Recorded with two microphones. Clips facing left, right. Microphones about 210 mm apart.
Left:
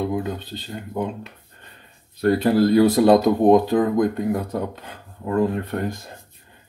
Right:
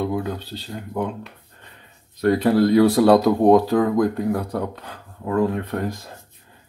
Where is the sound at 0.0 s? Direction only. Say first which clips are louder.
Even; centre (ahead or behind).